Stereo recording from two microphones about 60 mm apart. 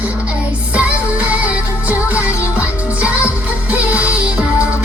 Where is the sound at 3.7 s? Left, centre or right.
Right.